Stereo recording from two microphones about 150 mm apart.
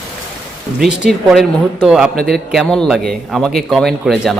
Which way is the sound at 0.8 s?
Centre (ahead or behind).